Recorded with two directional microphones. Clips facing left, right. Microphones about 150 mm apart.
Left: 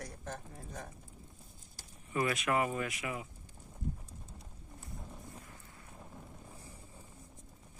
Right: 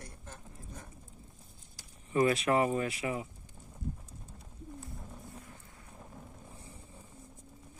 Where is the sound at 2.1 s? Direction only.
30° right (ahead or behind).